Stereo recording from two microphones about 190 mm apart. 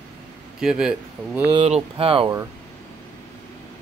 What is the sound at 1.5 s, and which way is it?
Speech, 30° right (ahead or behind).